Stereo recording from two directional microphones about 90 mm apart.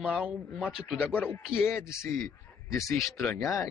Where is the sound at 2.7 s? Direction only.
35° left (ahead or behind).